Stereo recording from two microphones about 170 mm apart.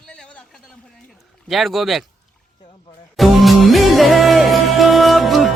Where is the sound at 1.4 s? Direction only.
Centre (ahead or behind).